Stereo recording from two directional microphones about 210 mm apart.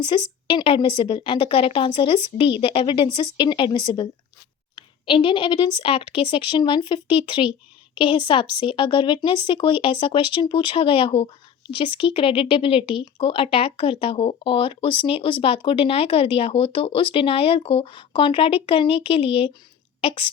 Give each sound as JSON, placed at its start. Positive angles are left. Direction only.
{"t": 0.1, "sound": "speech", "side_deg": 25}